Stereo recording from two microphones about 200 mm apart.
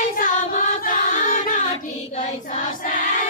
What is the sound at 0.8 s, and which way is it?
Music, 45° left (ahead or behind).